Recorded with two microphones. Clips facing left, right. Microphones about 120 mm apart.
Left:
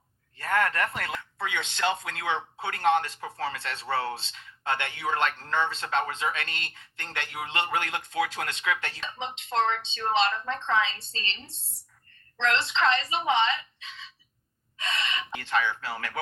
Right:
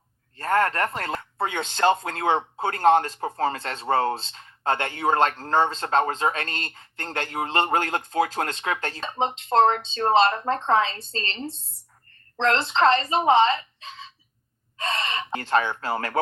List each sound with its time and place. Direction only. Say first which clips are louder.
0.3 s speech: right 4 dB; 40° right (ahead or behind)